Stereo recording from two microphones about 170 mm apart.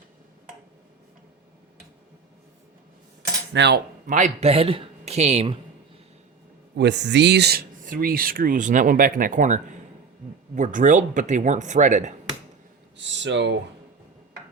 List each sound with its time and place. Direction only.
3.5 s cutlery: 90° right
4.0 s a man's voice: 45° right (ahead or behind)
6.7 s speech: 90° right
7.8 s speech: 55° right (ahead or behind)
13.0 s speech: 90° right